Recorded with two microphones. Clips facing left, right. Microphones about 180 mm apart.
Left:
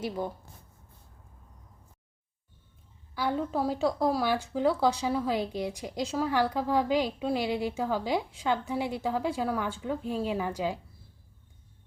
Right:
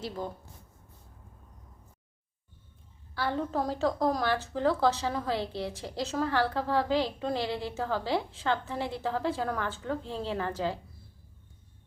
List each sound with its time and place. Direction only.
3.2 s a woman's voice: 10° left (ahead or behind)